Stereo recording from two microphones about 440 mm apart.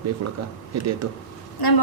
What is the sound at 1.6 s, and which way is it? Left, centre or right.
Speech, left.